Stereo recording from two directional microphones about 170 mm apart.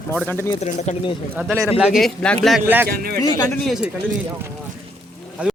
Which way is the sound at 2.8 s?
65° right (ahead or behind).